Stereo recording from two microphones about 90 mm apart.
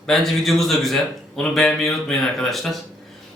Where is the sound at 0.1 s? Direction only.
5° left (ahead or behind).